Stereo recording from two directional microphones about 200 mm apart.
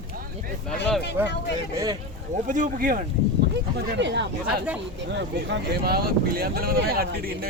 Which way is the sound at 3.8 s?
60° right (ahead or behind).